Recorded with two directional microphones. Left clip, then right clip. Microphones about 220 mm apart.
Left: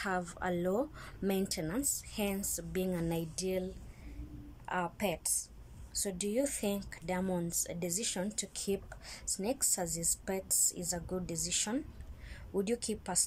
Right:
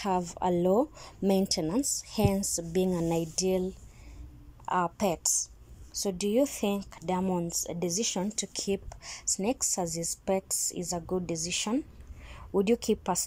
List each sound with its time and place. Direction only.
0.0 s speech: 10° right (ahead or behind)